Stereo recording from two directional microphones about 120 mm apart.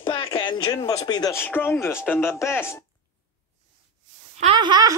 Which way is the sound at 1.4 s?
20° left (ahead or behind).